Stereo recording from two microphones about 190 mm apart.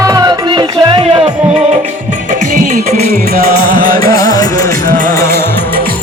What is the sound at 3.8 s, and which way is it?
Music, 45° right (ahead or behind).